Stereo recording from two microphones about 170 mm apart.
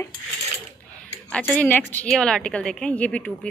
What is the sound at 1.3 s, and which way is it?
A woman's voice, 10° left (ahead or behind).